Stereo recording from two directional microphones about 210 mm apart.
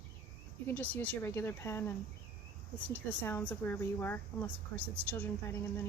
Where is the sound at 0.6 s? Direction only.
5° left (ahead or behind).